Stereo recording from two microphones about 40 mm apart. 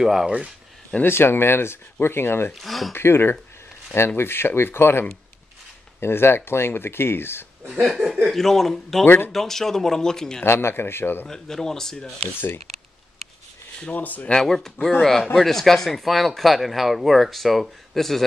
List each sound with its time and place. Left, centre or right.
0.0 s speech: centre
1.0 s speech: left
2.5 s speech: centre
2.9 s speech: left
7.8 s speech: centre
8.3 s speech: centre
9.0 s speech: left
9.3 s speech: centre
10.4 s speech: left
11.2 s speech: centre
13.9 s speech: left
14.3 s speech: centre